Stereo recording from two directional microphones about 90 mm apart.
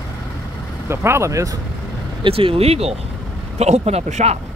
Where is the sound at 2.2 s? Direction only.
85° right.